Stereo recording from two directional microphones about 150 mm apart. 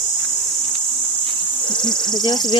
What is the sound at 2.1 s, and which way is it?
Speech, 30° left (ahead or behind).